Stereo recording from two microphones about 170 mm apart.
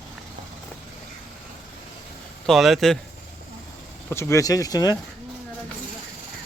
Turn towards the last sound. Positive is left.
turn(degrees=20)  # may be behind; listen again after turning